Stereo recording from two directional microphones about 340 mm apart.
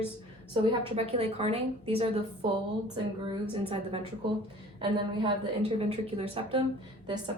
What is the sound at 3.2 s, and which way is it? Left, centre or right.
A woman's voice, centre.